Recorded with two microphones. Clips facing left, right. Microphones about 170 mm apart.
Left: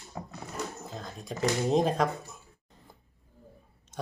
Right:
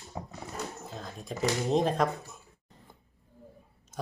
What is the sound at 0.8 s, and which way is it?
Speech, centre (ahead or behind).